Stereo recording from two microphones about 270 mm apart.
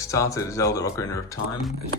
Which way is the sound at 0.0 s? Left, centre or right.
Centre.